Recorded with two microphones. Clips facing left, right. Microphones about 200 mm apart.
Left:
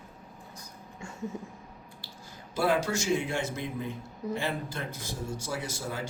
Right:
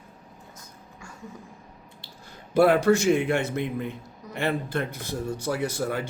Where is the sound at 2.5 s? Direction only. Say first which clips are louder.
Right 9 dB; 60° right (ahead or behind).